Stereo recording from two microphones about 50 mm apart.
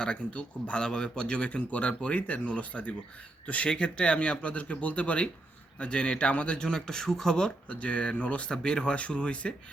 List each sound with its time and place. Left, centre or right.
0.0 s speech: left
3.7 s speech: centre
7.7 s speech: left